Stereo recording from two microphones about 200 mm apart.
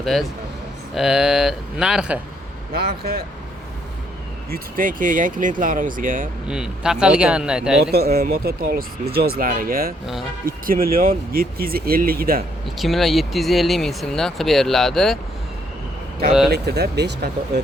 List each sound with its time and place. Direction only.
0.0 s speech: centre (ahead or behind)
2.7 s speech: 50° right (ahead or behind)
4.5 s speech: 40° right (ahead or behind)
6.5 s speech: 5° right (ahead or behind)
7.9 s speech: 50° right (ahead or behind)
12.7 s speech: centre (ahead or behind)
16.5 s speech: 55° right (ahead or behind)